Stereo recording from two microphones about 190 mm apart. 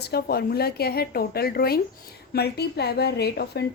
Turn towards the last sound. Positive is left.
turn(degrees=60)  # may be behind; listen again after turning